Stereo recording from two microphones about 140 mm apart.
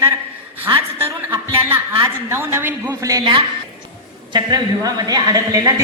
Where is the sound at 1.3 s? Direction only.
20° right (ahead or behind).